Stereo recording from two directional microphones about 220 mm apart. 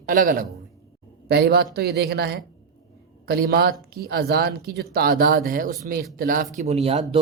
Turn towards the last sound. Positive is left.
turn(degrees=-25)  # may be behind; listen again after turning